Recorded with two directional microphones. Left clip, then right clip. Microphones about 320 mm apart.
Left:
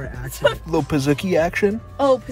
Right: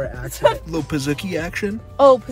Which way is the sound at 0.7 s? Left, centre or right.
Centre.